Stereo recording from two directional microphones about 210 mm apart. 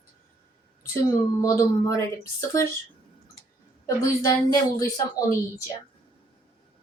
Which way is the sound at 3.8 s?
15° left (ahead or behind).